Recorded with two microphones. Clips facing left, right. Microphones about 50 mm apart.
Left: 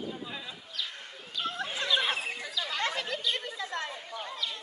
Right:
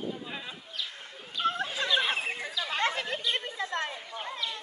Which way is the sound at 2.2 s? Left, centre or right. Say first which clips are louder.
Right 2 dB; right.